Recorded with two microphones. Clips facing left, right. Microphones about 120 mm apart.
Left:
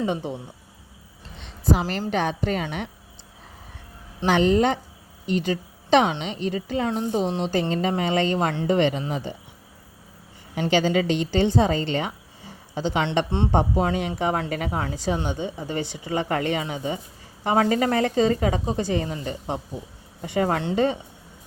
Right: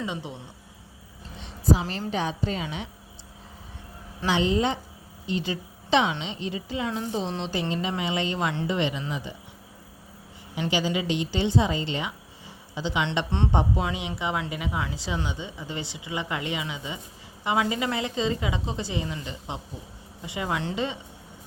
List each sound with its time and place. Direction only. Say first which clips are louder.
0.0 s a woman's voice: left 7 dB; 55° left (ahead or behind)
1.9 s a woman's voice: left 4 dB; 70° left (ahead or behind)
4.3 s a woman's voice: left 5 dB; 55° left (ahead or behind)
6.8 s a woman's voice: left 5 dB; 40° left (ahead or behind)
10.5 s a woman's voice: left 5 dB; 55° left (ahead or behind)
11.9 s a sound: left 5 dB; 55° left (ahead or behind)
13.5 s a woman's voice: left 4 dB; 45° left (ahead or behind)